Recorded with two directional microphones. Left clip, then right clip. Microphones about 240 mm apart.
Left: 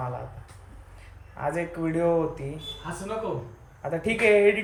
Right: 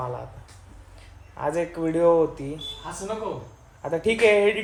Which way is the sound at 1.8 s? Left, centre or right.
Centre.